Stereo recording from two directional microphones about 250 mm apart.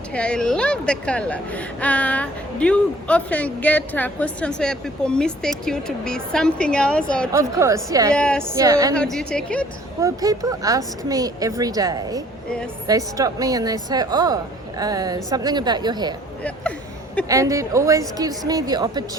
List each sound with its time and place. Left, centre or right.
0.1 s a woman's voice: centre
7.3 s a woman's voice: centre
8.1 s a woman's voice: centre
8.5 s a woman's voice: centre
9.0 s a woman's voice: centre
10.0 s a woman's voice: centre
17.2 s a woman's voice: centre